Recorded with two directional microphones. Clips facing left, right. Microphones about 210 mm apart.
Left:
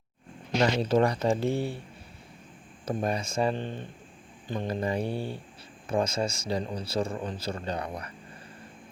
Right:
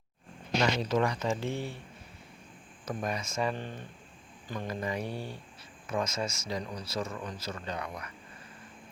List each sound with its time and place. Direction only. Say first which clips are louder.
0.8 s speech: left 5 dB; 30° left (ahead or behind)
2.8 s speech: left 5 dB; 30° left (ahead or behind)